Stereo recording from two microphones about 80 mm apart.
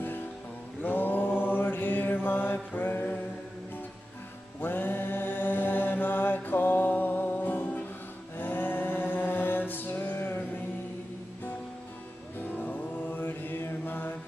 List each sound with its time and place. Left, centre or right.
0.8 s mantra: left
4.6 s mantra: left
12.4 s mantra: left